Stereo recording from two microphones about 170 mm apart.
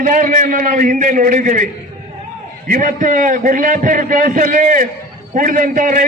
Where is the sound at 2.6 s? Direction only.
50° right (ahead or behind).